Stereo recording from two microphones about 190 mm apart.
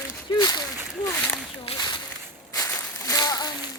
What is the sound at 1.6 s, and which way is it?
Speech, 25° left (ahead or behind).